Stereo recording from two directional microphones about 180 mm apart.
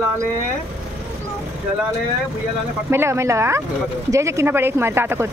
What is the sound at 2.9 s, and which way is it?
Speech, 15° right (ahead or behind).